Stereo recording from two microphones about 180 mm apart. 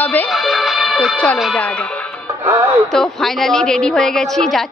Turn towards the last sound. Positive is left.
turn(degrees=0)  # may be behind; listen again after turning